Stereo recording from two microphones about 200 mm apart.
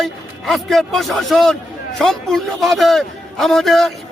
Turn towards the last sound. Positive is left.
turn(degrees=0)  # may be behind; listen again after turning